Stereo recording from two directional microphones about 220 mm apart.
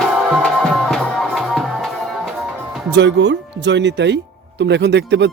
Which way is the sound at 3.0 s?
55° right (ahead or behind).